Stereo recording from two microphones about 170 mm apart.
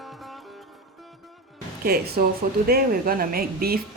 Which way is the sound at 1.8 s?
65° right (ahead or behind).